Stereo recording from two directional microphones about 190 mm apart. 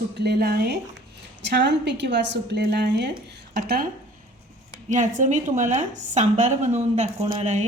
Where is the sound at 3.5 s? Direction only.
50° right (ahead or behind).